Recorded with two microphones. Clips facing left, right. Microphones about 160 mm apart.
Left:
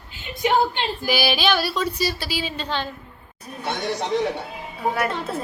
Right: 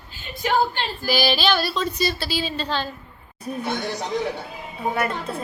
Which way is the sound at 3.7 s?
25° left (ahead or behind).